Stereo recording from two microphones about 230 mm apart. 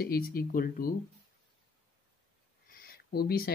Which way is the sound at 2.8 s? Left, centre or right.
Left.